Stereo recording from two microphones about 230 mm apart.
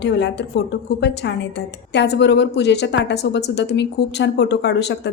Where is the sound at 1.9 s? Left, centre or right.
Left.